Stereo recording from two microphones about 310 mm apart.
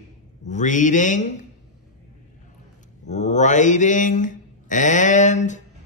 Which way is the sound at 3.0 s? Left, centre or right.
Left.